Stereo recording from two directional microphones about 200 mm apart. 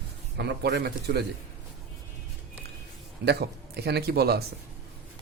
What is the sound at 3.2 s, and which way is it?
Speech, 55° right (ahead or behind).